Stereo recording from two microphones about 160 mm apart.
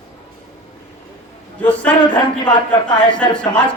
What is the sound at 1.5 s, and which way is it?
Speech, 10° left (ahead or behind).